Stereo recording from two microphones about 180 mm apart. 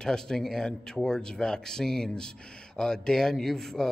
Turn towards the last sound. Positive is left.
turn(degrees=0)  # may be behind; listen again after turning